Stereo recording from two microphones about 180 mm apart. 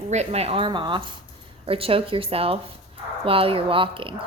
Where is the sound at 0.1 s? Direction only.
35° right (ahead or behind).